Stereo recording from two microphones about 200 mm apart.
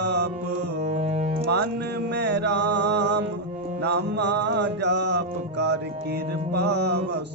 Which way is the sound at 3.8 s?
55° right (ahead or behind).